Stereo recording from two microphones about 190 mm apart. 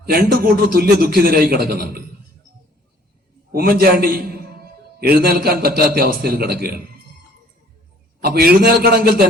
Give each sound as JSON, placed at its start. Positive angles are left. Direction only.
{"t": 0.0, "sound": "a man's voice", "side_deg": -55}
{"t": 3.5, "sound": "a man's voice", "side_deg": -50}
{"t": 8.2, "sound": "a man's voice", "side_deg": -55}